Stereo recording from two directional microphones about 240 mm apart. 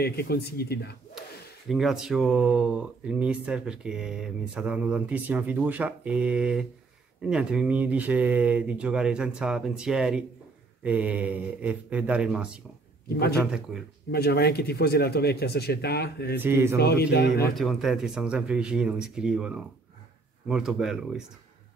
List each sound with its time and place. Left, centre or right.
0.0 s speech: left
1.7 s speech: centre
13.7 s speech: centre
14.1 s speech: left
16.3 s speech: centre
16.7 s speech: left
17.6 s speech: centre